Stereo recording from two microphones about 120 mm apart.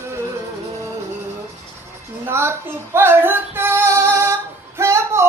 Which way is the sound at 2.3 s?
20° right (ahead or behind).